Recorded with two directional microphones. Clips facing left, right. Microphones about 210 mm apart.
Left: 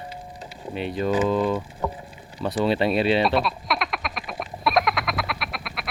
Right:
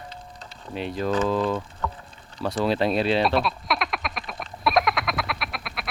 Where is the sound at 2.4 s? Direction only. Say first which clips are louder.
Left 1 dB; centre (ahead or behind).